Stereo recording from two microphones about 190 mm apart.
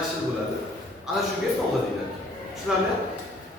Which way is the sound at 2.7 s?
Centre (ahead or behind).